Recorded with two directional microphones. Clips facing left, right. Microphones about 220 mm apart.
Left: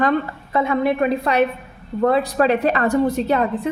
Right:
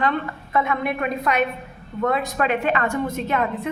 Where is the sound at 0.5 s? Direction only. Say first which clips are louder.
Left 5 dB; 30° left (ahead or behind).